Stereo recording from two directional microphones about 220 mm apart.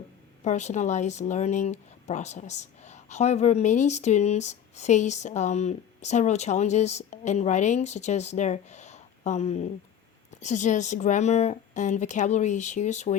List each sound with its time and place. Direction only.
0.4 s speech: 30° left (ahead or behind)